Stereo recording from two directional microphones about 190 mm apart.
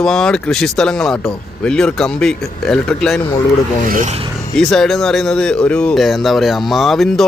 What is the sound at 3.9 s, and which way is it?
Filing, 40° right (ahead or behind).